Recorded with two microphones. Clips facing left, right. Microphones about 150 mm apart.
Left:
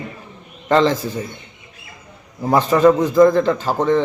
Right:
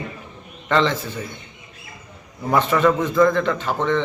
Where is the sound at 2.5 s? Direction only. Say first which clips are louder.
Left 4 dB; 35° left (ahead or behind).